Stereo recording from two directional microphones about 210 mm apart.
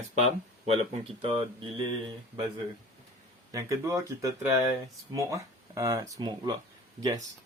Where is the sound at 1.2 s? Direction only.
25° right (ahead or behind).